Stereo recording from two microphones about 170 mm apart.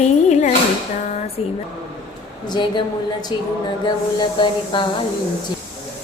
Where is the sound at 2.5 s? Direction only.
25° left (ahead or behind).